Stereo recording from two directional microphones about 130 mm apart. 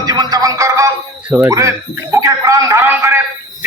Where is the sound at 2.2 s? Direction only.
25° right (ahead or behind).